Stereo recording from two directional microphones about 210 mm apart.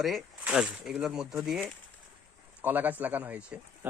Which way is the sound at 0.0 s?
Centre (ahead or behind).